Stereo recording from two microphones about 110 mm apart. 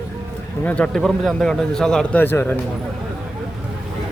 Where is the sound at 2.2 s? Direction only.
20° left (ahead or behind).